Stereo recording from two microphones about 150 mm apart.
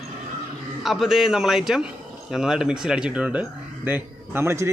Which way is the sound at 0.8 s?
Centre (ahead or behind).